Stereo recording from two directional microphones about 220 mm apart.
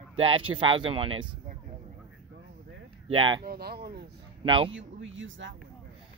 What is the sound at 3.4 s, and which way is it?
Speech, 45° right (ahead or behind).